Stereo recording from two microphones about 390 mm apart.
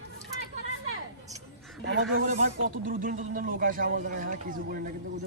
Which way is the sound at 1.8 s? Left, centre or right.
Right.